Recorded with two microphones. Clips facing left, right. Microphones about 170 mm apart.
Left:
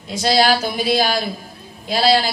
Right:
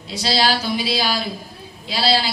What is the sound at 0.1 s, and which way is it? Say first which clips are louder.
A man's voice: left 4 dB; 50° left (ahead or behind).